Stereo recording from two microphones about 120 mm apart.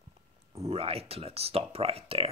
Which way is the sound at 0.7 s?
55° right (ahead or behind).